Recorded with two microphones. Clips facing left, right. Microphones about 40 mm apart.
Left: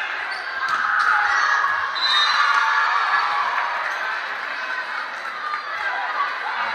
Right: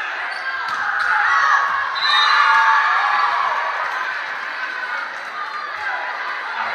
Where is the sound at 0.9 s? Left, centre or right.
Right.